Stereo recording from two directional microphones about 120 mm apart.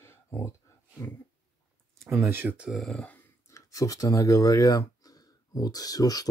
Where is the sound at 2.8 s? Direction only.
5° left (ahead or behind).